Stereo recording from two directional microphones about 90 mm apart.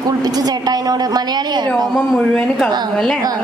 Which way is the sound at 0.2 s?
45° right (ahead or behind).